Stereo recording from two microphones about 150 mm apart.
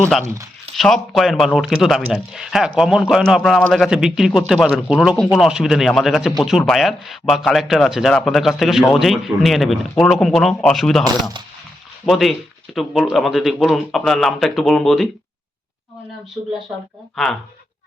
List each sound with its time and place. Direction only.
0.0 s speech: centre (ahead or behind)
12.0 s speech: centre (ahead or behind)